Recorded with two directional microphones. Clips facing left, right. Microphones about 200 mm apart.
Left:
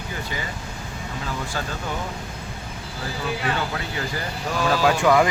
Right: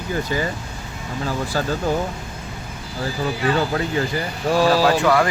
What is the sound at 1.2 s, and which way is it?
Speech, 40° right (ahead or behind).